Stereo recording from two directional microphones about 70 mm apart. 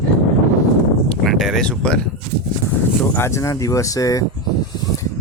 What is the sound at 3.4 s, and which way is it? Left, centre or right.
Speech, left.